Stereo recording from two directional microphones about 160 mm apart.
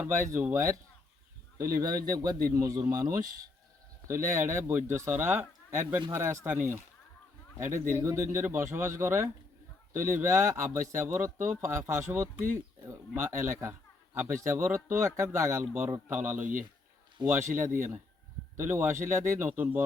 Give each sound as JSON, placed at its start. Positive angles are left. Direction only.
{"t": 0.0, "sound": "a man's voice", "side_deg": -15}
{"t": 17.2, "sound": "a man's voice", "side_deg": -30}
{"t": 17.6, "sound": "a man's voice", "side_deg": -15}